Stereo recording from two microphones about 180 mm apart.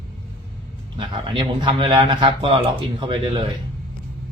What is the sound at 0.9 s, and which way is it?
Speech, 30° right (ahead or behind).